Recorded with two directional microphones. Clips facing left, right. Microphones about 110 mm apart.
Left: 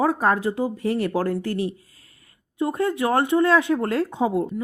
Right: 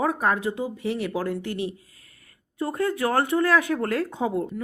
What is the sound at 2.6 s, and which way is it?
Speech, 25° left (ahead or behind).